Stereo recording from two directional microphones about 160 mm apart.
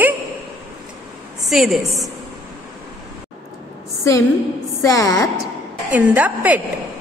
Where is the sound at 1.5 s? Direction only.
Centre (ahead or behind).